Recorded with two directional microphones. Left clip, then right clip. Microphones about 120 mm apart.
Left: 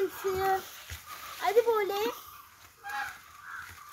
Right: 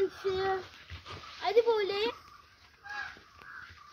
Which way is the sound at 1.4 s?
30° left (ahead or behind).